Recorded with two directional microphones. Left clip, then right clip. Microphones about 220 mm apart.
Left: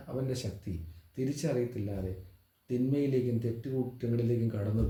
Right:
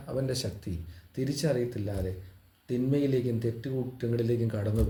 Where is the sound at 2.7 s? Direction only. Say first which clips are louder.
Right 3 dB; 35° right (ahead or behind).